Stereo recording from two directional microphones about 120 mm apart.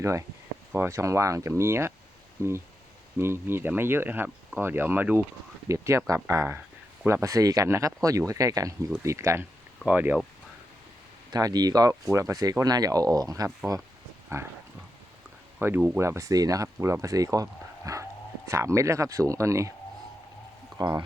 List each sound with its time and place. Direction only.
0.0 s speech: 25° right (ahead or behind)
11.3 s speech: 30° right (ahead or behind)
15.6 s speech: 20° right (ahead or behind)
20.7 s speech: 30° right (ahead or behind)